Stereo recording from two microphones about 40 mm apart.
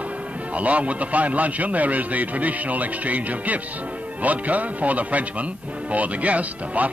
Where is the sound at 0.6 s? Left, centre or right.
Right.